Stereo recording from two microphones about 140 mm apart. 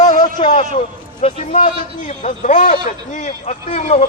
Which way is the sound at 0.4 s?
55° left (ahead or behind).